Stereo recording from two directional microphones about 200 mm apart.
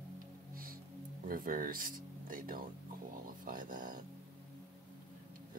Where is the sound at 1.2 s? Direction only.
45° right (ahead or behind).